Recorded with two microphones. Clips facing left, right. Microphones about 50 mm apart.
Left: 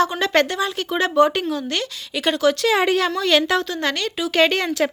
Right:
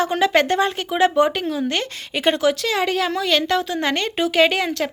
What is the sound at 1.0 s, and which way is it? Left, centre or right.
Speech, centre.